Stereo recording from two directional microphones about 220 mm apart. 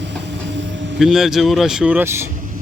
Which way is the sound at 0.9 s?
Centre (ahead or behind).